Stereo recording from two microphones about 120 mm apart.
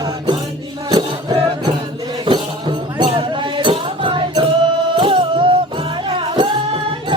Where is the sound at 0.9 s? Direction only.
35° right (ahead or behind).